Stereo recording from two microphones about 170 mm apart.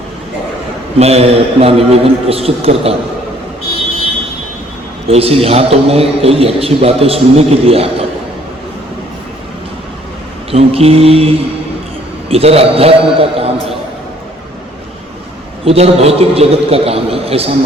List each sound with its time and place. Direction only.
0.9 s a man's voice: 40° right (ahead or behind)
5.0 s a man's voice: 35° right (ahead or behind)
10.5 s a man's voice: 35° right (ahead or behind)
15.6 s a man's voice: 35° right (ahead or behind)